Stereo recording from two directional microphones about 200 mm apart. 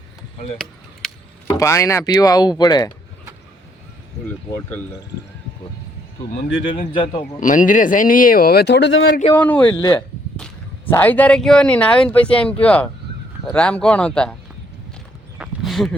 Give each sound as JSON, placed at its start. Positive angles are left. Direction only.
{"t": 1.0, "sound": "a sound", "side_deg": 0}
{"t": 1.5, "sound": "speech", "side_deg": 15}
{"t": 7.0, "sound": "a man's voice", "side_deg": 25}
{"t": 7.3, "sound": "speech", "side_deg": 40}
{"t": 9.3, "sound": "speech", "side_deg": 5}
{"t": 9.7, "sound": "a man's voice", "side_deg": 20}
{"t": 10.3, "sound": "a sound", "side_deg": 5}
{"t": 10.9, "sound": "speech", "side_deg": 10}
{"t": 15.4, "sound": "a sound", "side_deg": 0}